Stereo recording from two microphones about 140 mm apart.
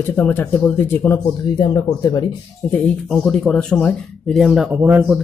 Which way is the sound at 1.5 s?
30° left (ahead or behind).